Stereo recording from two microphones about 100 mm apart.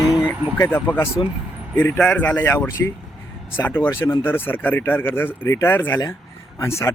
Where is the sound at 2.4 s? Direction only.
25° left (ahead or behind).